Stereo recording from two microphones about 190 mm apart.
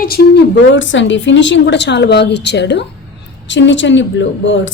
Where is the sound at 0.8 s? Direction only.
80° left.